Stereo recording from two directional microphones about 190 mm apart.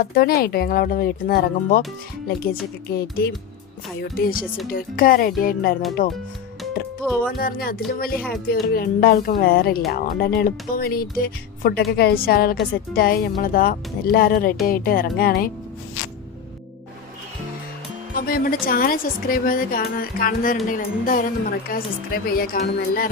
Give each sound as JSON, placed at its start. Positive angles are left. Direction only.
{"t": 0.0, "sound": "a woman's voice", "side_deg": 50}
{"t": 2.9, "sound": "a woman's voice", "side_deg": 55}
{"t": 7.0, "sound": "music", "side_deg": 0}
{"t": 7.3, "sound": "a woman's voice", "side_deg": 50}
{"t": 18.1, "sound": "a woman's voice", "side_deg": 50}